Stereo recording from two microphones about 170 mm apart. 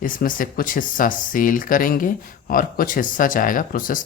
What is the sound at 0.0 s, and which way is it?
Speech, 55° left (ahead or behind).